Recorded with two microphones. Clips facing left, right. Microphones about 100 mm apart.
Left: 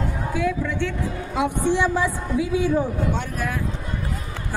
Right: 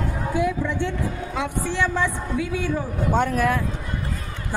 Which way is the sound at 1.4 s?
15° left (ahead or behind).